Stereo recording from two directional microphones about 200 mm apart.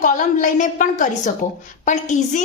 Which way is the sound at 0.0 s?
40° left (ahead or behind).